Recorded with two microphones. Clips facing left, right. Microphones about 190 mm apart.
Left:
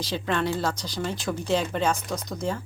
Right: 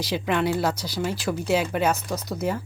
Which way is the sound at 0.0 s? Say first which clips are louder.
Right 3 dB; 10° right (ahead or behind).